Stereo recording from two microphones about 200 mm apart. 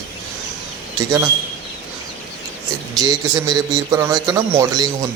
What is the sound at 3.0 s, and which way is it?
A man's voice, 20° right (ahead or behind).